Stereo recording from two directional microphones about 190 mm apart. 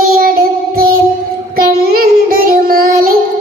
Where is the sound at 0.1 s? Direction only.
50° right (ahead or behind).